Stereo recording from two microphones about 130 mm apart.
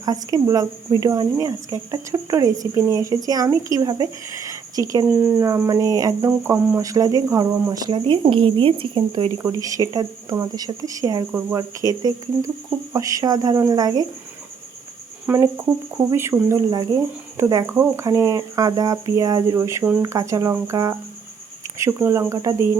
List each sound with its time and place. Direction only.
0.0 s speech: 30° right (ahead or behind)
9.4 s speech: 25° right (ahead or behind)
15.3 s speech: 15° right (ahead or behind)